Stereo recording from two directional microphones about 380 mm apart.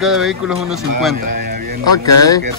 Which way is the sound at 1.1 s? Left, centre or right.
Right.